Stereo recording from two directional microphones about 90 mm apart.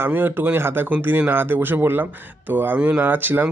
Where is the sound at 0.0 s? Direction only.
20° right (ahead or behind).